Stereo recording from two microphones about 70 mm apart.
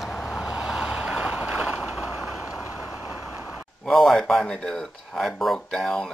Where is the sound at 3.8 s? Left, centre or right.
Centre.